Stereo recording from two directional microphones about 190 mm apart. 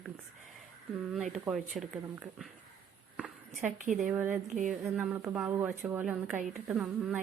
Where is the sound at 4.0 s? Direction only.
5° right (ahead or behind).